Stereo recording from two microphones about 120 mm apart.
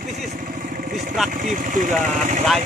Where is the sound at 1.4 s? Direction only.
90° right.